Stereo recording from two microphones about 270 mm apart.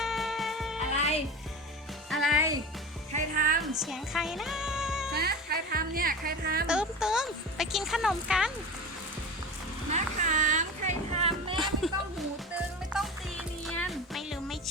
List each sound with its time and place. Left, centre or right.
0.0 s music: centre
0.9 s music: left
2.0 s music: centre
3.1 s music: right
3.6 s speech: centre
5.1 s speech: right
6.7 s a woman's voice: centre
9.9 s a sound: right
11.5 s a sound: centre
12.9 s music: centre